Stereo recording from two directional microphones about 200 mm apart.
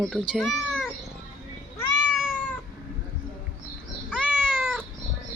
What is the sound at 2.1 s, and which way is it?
Cat, centre (ahead or behind).